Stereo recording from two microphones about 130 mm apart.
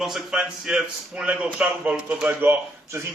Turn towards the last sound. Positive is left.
turn(degrees=-15)  # may be behind; listen again after turning